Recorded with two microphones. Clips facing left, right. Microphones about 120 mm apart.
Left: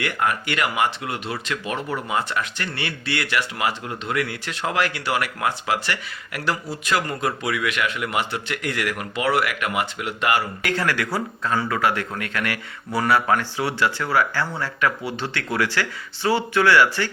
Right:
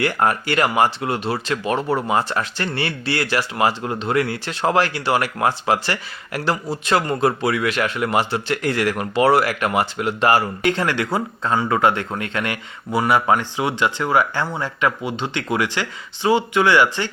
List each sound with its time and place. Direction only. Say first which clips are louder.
0.0 s speech: right 4 dB; 35° right (ahead or behind); by 17.1 s 20° right (ahead or behind)